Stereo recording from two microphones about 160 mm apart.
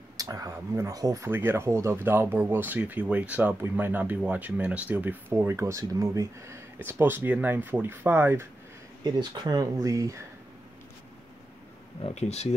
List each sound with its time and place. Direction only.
0.2 s speech: 20° right (ahead or behind)
9.0 s speech: 25° right (ahead or behind)
12.0 s speech: 40° left (ahead or behind)